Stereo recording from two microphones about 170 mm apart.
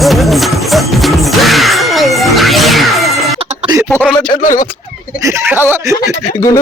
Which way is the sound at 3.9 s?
5° left (ahead or behind).